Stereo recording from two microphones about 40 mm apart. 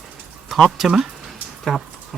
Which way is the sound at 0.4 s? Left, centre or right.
Centre.